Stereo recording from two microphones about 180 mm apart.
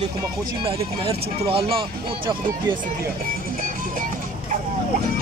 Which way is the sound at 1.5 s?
30° right (ahead or behind).